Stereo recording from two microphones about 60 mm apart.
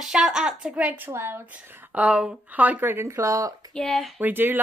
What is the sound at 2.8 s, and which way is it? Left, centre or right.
Speech, right.